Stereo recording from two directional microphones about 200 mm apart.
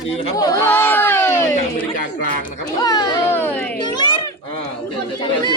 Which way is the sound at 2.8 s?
20° left (ahead or behind).